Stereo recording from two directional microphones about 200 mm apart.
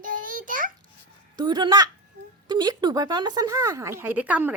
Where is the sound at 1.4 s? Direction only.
20° right (ahead or behind).